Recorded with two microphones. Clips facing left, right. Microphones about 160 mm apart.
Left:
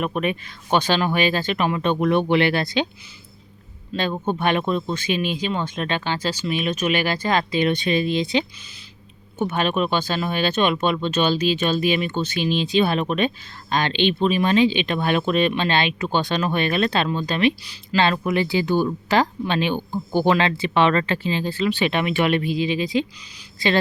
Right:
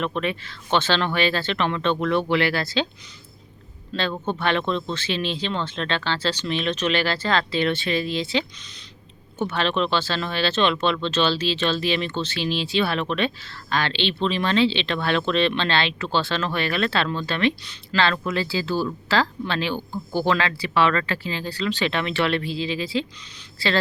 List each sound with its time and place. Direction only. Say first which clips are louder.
0.0 s speech: left 2 dB; 15° left (ahead or behind)
3.9 s speech: left 2 dB; 15° left (ahead or behind)